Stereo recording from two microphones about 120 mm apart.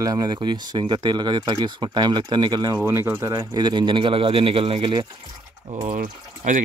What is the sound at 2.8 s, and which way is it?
Speech, 20° right (ahead or behind).